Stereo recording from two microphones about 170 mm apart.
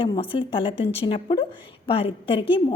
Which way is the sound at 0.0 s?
30° left (ahead or behind).